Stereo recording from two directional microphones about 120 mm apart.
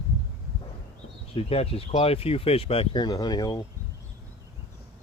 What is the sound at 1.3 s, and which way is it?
Speech, 55° left (ahead or behind).